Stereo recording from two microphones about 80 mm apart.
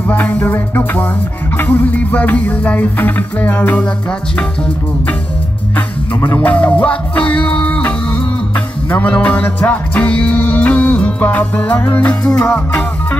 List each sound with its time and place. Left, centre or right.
0.0 s music: left
4.4 s speech: centre
5.8 s music: left